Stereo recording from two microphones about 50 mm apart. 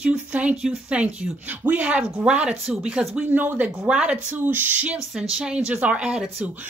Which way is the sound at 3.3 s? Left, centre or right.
Right.